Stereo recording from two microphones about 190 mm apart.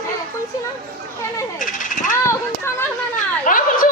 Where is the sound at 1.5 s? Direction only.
45° left (ahead or behind).